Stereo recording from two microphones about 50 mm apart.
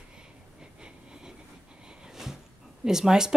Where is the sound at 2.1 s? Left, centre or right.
Centre.